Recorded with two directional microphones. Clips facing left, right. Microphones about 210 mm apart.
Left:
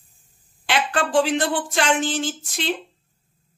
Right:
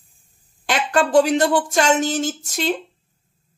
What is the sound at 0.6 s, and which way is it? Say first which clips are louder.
Speech: right 3 dB; 45° right (ahead or behind).